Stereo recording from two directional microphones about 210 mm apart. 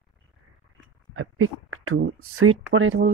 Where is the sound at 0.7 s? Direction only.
80° right.